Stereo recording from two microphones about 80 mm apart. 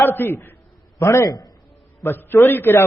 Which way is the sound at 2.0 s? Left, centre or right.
Left.